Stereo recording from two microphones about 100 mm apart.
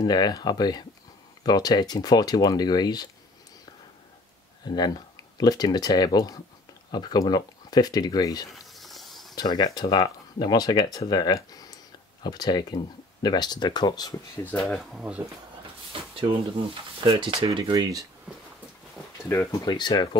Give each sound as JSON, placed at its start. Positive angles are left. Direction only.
{"t": 0.0, "sound": "speech", "side_deg": 40}
{"t": 4.6, "sound": "speech", "side_deg": 45}
{"t": 8.5, "sound": "snake", "side_deg": 0}
{"t": 9.3, "sound": "speech", "side_deg": 45}
{"t": 14.6, "sound": "speech", "side_deg": 0}
{"t": 15.9, "sound": "a sound", "side_deg": -65}
{"t": 17.0, "sound": "speech", "side_deg": -55}
{"t": 17.6, "sound": "speech", "side_deg": -40}
{"t": 19.2, "sound": "speech", "side_deg": 25}
{"t": 19.6, "sound": "speech", "side_deg": 40}